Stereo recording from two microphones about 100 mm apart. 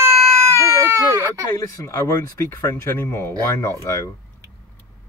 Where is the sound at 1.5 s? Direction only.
30° left (ahead or behind).